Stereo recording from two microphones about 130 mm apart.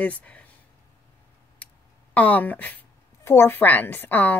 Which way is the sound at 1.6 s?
10° left (ahead or behind).